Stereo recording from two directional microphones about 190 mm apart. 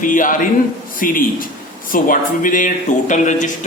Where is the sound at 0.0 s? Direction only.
45° left (ahead or behind).